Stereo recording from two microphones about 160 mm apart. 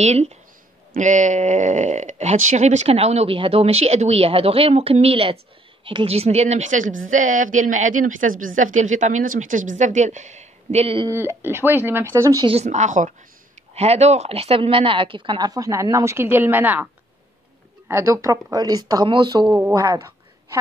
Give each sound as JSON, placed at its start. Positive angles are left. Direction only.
{"t": 0.0, "sound": "speech", "side_deg": -45}
{"t": 11.1, "sound": "speech", "side_deg": -15}
{"t": 12.4, "sound": "speech", "side_deg": -45}